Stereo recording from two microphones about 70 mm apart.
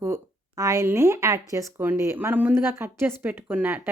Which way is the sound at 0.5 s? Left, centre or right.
Right.